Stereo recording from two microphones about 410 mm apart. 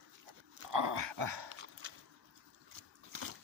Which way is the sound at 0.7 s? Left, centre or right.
Right.